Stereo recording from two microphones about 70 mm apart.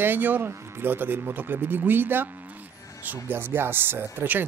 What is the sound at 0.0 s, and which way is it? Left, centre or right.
Speech, right.